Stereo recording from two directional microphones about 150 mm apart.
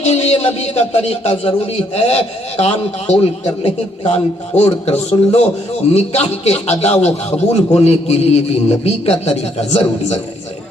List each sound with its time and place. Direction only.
0.0 s a man's voice: 45° left (ahead or behind)